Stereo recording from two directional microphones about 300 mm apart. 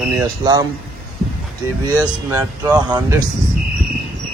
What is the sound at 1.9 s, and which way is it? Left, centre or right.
Speech, centre.